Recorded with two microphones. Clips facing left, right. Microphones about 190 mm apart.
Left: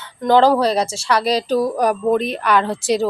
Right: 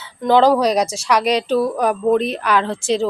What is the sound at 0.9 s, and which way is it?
Speech, 35° left (ahead or behind).